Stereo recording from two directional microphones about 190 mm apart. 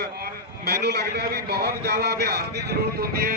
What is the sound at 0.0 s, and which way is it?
A man's voice, 60° right (ahead or behind).